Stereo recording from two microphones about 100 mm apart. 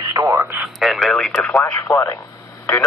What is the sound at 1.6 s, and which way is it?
Speech, 25° left (ahead or behind).